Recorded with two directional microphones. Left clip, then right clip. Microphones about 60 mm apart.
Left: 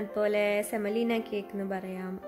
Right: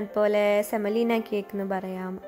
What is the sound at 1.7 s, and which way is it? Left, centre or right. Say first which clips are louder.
Speech: right 7 dB; right.